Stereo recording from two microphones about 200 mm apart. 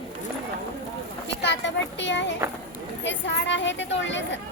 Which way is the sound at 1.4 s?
60° left (ahead or behind).